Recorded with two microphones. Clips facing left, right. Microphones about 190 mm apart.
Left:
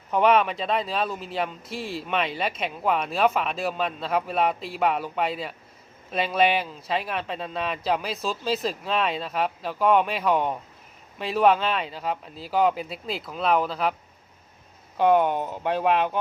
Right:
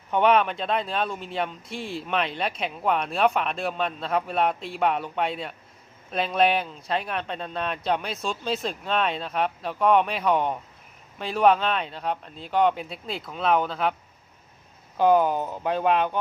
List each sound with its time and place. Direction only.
0.1 s speech: centre (ahead or behind)
14.9 s speech: centre (ahead or behind)